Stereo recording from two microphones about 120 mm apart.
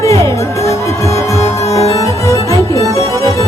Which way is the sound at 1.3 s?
60° left (ahead or behind).